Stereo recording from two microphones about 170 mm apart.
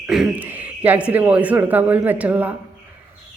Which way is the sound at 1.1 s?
10° right (ahead or behind).